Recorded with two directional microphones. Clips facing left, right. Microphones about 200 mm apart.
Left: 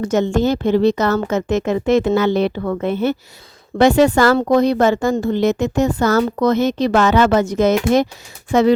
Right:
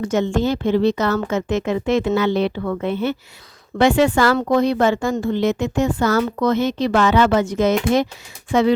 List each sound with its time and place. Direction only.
0.0 s a woman's voice: 40° left (ahead or behind)